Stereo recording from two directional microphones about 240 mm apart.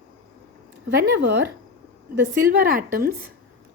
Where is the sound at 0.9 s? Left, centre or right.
Right.